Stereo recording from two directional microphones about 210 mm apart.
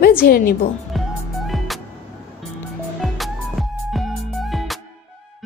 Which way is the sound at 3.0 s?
Centre (ahead or behind).